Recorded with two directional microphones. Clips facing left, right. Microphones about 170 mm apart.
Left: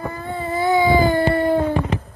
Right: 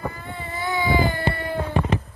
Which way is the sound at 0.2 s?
40° left (ahead or behind).